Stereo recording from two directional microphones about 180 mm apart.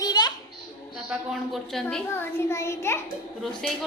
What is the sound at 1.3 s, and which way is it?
Speech, centre (ahead or behind).